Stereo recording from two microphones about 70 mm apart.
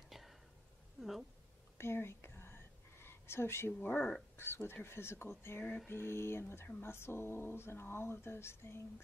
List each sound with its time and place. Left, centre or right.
0.1 s whispering: centre
1.8 s whispering: left
3.8 s speech: left
4.4 s speech: left